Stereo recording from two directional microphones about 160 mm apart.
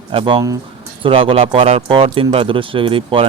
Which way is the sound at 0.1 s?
35° right (ahead or behind).